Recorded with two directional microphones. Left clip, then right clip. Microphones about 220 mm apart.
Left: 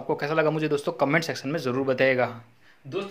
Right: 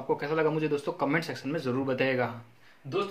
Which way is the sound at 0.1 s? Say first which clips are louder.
Left 3 dB; 35° left (ahead or behind).